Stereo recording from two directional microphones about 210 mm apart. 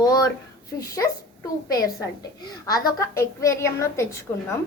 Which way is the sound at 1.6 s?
15° left (ahead or behind).